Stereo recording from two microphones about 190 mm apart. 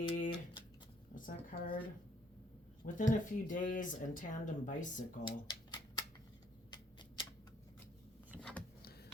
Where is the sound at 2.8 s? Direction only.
45° left (ahead or behind).